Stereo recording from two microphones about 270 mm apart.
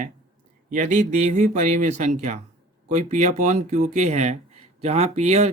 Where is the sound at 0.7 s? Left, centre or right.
Right.